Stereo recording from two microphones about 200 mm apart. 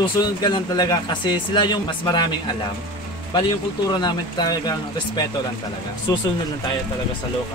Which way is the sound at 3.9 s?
20° left (ahead or behind).